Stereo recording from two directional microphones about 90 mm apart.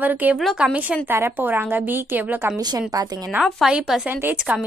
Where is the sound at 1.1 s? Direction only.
25° right (ahead or behind).